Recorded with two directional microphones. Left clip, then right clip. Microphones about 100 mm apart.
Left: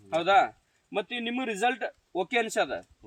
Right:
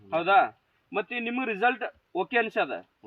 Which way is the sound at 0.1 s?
10° left (ahead or behind).